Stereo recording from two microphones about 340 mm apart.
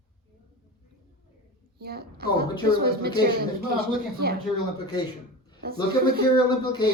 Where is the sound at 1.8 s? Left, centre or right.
Right.